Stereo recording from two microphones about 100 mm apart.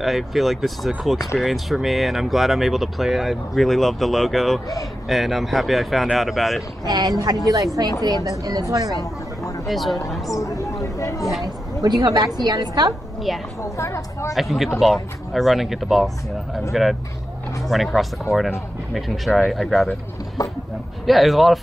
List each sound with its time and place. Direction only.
0.0 s speech: centre (ahead or behind)
6.8 s a woman's voice: 40° right (ahead or behind)
9.7 s speech: centre (ahead or behind)
10.3 s a sound: 30° left (ahead or behind)
11.4 s a woman's voice: 40° right (ahead or behind)
13.6 s a woman's voice: 30° left (ahead or behind)
14.3 s speech: centre (ahead or behind)
18.9 s speech: centre (ahead or behind)
20.4 s a sound: 40° left (ahead or behind)
21.0 s speech: centre (ahead or behind)